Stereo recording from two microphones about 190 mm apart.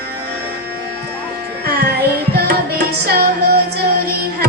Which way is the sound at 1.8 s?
55° right (ahead or behind).